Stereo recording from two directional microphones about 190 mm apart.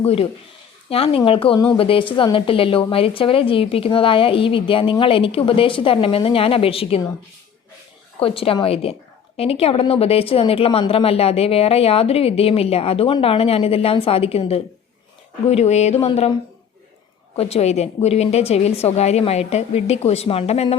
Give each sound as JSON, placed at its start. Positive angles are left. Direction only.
{"t": 0.0, "sound": "speech", "side_deg": 30}
{"t": 8.2, "sound": "speech", "side_deg": 30}
{"t": 17.3, "sound": "speech", "side_deg": 35}